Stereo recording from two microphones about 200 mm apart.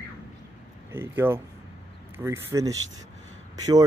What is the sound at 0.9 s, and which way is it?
Speech, 10° right (ahead or behind).